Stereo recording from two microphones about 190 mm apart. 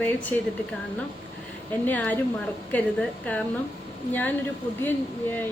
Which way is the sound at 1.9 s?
10° left (ahead or behind).